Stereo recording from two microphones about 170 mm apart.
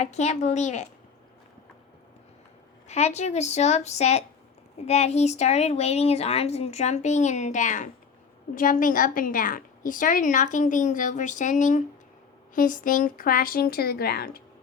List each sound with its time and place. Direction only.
0.0 s a woman's voice: 40° left (ahead or behind)
2.8 s a woman's voice: 40° left (ahead or behind); by 14.4 s 65° left (ahead or behind)